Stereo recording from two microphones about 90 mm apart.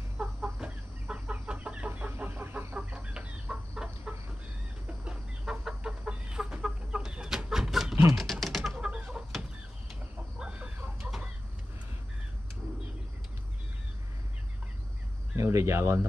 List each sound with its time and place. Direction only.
0.2 s chicken: 10° right (ahead or behind)
7.9 s typing: 35° right (ahead or behind)
8.2 s chicken: centre (ahead or behind)
10.4 s chicken: 10° right (ahead or behind)
15.3 s a sound: 30° right (ahead or behind)